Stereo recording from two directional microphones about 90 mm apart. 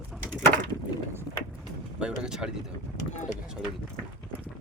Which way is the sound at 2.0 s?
10° right (ahead or behind).